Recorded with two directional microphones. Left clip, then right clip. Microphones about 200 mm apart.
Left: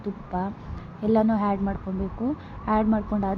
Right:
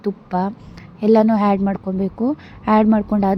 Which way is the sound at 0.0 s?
35° right (ahead or behind).